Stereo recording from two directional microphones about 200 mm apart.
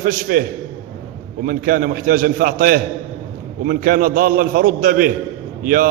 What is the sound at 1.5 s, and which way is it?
A man's voice, 45° right (ahead or behind).